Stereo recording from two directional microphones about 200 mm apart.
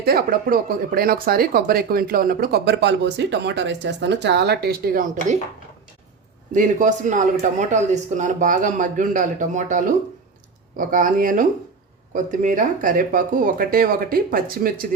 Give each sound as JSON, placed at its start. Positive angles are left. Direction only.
{"t": 0.0, "sound": "speech", "side_deg": -50}
{"t": 6.5, "sound": "speech", "side_deg": -40}